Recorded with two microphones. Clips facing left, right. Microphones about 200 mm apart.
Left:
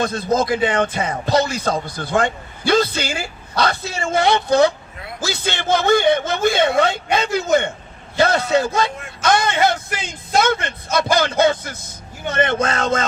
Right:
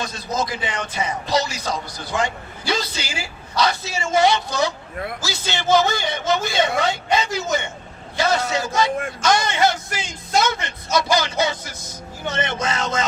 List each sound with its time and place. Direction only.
0.0 s a man's voice: 55° left (ahead or behind)